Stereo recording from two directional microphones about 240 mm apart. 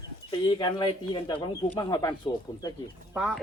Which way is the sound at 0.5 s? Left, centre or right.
Centre.